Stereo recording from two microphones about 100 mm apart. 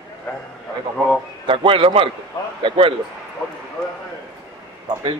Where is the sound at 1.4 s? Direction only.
60° right (ahead or behind).